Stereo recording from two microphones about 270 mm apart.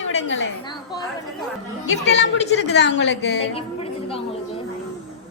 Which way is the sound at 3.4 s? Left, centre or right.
Left.